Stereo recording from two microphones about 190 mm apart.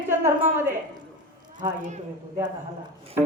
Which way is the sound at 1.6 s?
40° right (ahead or behind).